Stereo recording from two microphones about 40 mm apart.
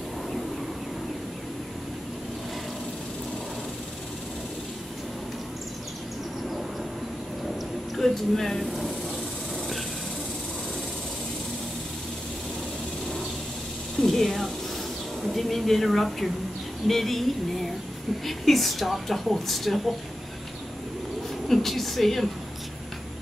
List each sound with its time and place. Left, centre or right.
7.9 s speech: centre
14.0 s snake: centre
15.3 s speech: centre
21.5 s speech: centre